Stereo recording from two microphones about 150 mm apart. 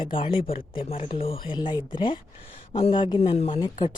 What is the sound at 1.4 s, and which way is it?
Speech, 30° left (ahead or behind).